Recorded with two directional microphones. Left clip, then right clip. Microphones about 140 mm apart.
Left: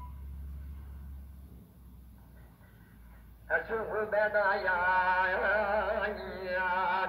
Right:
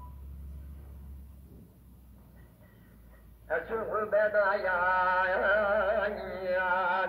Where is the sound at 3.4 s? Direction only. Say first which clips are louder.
Even; 35° left (ahead or behind).